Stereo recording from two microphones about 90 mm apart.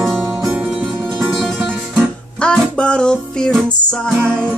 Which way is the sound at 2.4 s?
10° left (ahead or behind).